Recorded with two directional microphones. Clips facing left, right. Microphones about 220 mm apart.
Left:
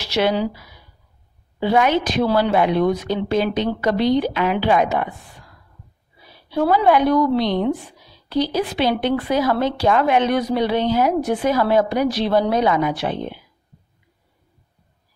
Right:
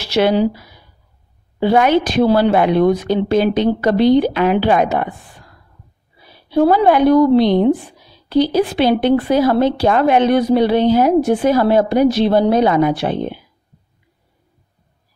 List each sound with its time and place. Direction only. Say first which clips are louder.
0.3 s a woman's voice: right 6 dB; 45° right (ahead or behind)
1.7 s a woman's voice: right 4 dB; 35° right (ahead or behind)
2.3 s a woman's voice: right 2 dB; 55° right (ahead or behind)
3.1 s a woman's voice: right 5 dB; 35° right (ahead or behind)
6.5 s a woman's voice: right 4 dB; 30° right (ahead or behind)